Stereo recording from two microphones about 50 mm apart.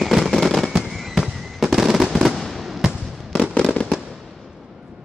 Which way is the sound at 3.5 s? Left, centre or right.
Centre.